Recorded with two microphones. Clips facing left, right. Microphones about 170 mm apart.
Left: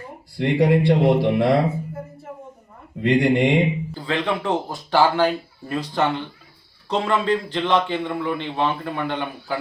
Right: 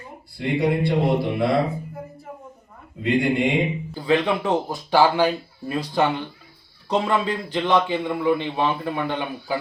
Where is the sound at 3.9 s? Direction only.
15° right (ahead or behind).